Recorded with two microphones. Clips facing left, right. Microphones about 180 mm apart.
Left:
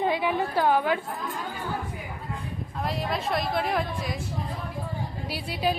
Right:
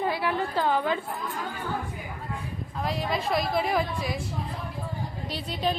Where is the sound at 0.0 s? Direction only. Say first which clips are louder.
Left 2 dB; 20° left (ahead or behind).